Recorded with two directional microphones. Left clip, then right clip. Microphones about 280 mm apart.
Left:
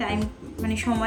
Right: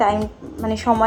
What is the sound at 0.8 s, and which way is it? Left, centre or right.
Speech, centre.